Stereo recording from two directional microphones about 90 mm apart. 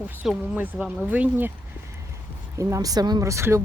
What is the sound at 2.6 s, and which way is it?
Speech, 35° right (ahead or behind).